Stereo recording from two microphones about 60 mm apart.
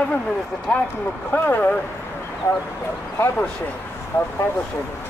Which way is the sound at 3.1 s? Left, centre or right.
Left.